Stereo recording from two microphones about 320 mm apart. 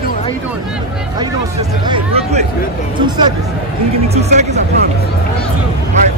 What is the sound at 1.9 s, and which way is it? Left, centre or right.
Speech, centre.